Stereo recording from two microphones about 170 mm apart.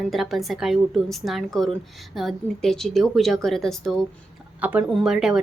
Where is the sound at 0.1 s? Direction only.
Centre (ahead or behind).